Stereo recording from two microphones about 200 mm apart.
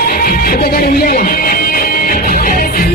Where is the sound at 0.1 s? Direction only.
45° left (ahead or behind).